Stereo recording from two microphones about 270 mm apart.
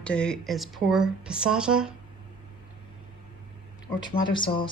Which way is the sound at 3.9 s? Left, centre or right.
Centre.